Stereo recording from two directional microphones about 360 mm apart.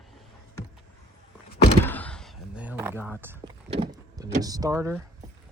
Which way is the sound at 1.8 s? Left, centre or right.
Centre.